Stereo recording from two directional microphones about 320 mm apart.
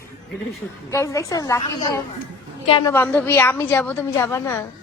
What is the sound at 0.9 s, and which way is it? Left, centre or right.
A woman's voice, centre.